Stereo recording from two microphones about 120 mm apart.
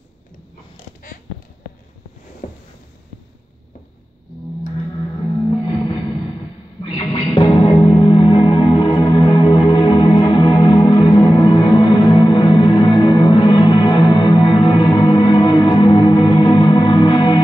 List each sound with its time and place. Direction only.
4.9 s music: 40° left (ahead or behind)